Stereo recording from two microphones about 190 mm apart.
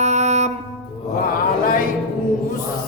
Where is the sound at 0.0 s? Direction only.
35° right (ahead or behind).